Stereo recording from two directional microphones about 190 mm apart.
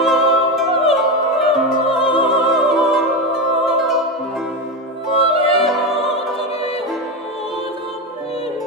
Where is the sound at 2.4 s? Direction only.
Centre (ahead or behind).